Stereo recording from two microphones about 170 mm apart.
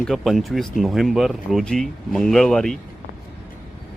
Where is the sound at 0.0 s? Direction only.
Centre (ahead or behind).